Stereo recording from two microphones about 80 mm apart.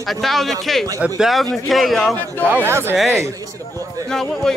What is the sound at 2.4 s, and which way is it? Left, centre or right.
Speech, right.